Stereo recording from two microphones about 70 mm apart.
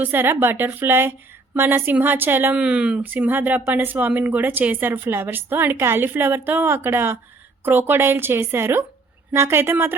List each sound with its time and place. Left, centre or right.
0.0 s speech: right
2.6 s speech: centre
3.0 s speech: right